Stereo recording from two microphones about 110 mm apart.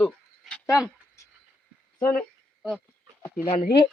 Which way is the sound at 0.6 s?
10° right (ahead or behind).